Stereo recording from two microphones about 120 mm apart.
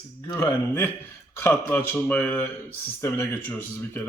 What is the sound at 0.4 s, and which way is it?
Speech, 15° left (ahead or behind).